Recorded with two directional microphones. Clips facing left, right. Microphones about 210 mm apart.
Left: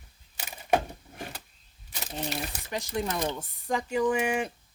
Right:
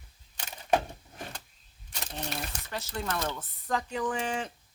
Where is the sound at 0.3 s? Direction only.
10° left (ahead or behind).